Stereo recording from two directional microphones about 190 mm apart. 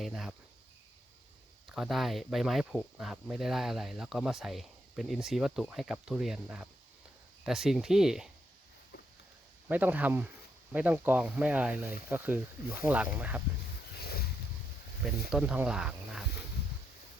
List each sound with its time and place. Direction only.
0.0 s speech: centre (ahead or behind)
1.6 s speech: centre (ahead or behind)
9.6 s speech: 10° right (ahead or behind)
14.0 s boat: 55° left (ahead or behind)
15.3 s speech: 5° right (ahead or behind)